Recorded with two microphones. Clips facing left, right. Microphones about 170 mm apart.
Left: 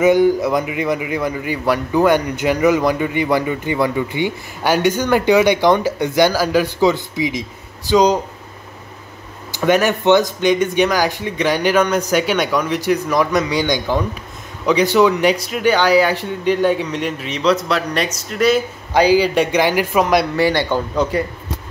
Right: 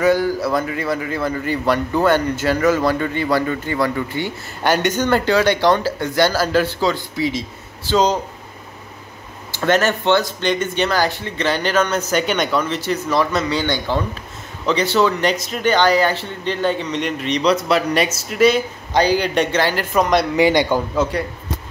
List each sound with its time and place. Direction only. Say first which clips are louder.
0.0 s a man's voice: left 4 dB; 20° left (ahead or behind)
9.6 s a man's voice: left 2 dB; 10° left (ahead or behind)
20.3 s a man's voice: right 1 dB; 15° right (ahead or behind)
20.9 s speech: left 2 dB; centre (ahead or behind)